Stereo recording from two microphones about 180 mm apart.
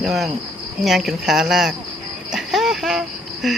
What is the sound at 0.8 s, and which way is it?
Speech, centre (ahead or behind).